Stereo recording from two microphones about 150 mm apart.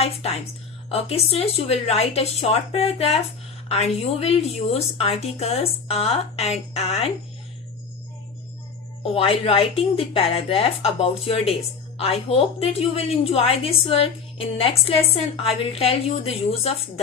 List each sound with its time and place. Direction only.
0.0 s a woman's voice: 45° left (ahead or behind)
9.1 s a woman's voice: 40° left (ahead or behind)